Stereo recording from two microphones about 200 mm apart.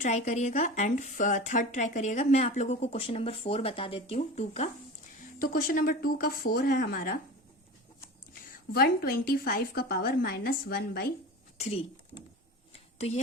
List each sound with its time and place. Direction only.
0.0 s speech: 35° left (ahead or behind)
5.4 s a woman's voice: 45° left (ahead or behind)
8.7 s a woman's voice: 50° left (ahead or behind)
11.6 s speech: 30° left (ahead or behind)
12.7 s a sound: 35° left (ahead or behind)